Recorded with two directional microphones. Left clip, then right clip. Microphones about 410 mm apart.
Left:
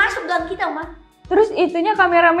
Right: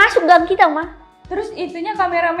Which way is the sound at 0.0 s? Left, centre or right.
Right.